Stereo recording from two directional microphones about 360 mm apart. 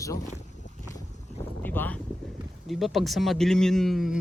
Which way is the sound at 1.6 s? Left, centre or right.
Centre.